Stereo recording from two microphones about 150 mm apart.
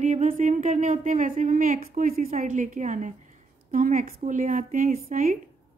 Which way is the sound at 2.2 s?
50° right (ahead or behind).